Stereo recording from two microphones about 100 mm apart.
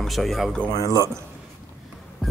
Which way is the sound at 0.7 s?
35° left (ahead or behind).